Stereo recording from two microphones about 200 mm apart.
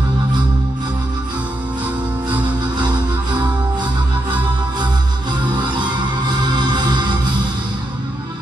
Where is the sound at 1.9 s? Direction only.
20° right (ahead or behind).